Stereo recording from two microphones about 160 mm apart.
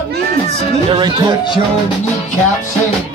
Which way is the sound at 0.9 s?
30° right (ahead or behind).